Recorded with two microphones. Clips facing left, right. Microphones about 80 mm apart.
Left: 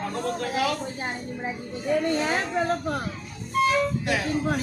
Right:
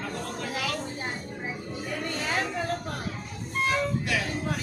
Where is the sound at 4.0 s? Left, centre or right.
Left.